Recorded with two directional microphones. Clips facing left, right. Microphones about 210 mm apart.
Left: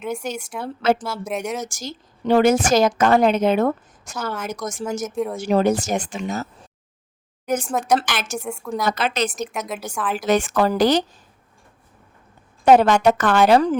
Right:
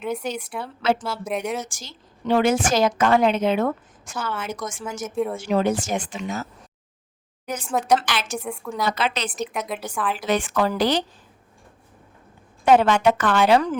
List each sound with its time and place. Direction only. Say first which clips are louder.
0.0 s a woman's voice: even; centre (ahead or behind)
0.6 s a woman's voice: left 3 dB; 45° left (ahead or behind)
1.2 s a woman's voice: even; centre (ahead or behind)
1.6 s a woman's voice: left 10 dB; 40° left (ahead or behind)
5.1 s a woman's voice: right 5 dB; centre (ahead or behind)
5.4 s a woman's voice: left 6 dB; 40° left (ahead or behind)
9.3 s a woman's voice: even; centre (ahead or behind)
10.2 s a woman's voice: left 5 dB; 45° left (ahead or behind)
12.6 s a woman's voice: left 3 dB; 40° left (ahead or behind)